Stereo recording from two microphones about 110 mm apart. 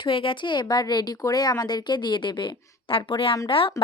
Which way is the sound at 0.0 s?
50° left (ahead or behind).